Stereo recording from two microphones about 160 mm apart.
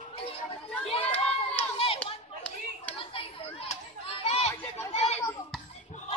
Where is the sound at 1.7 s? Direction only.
35° left (ahead or behind).